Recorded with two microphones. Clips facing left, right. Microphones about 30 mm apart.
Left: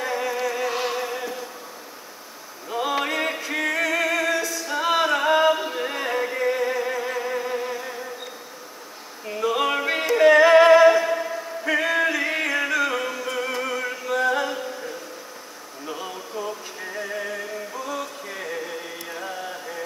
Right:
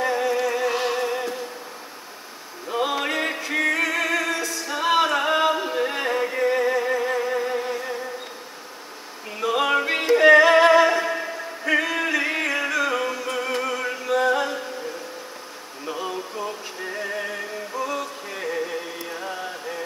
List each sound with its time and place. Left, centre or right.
0.0 s music: centre
2.7 s a sound: centre
3.1 s music: centre
5.4 s a sound: centre
6.1 s music: centre
9.4 s music: centre
10.2 s music: centre
11.8 s music: centre
15.9 s a sound: centre
17.1 s music: right
17.9 s music: centre